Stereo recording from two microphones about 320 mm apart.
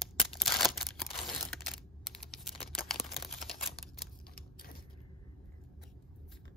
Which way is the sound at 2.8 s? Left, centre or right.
Centre.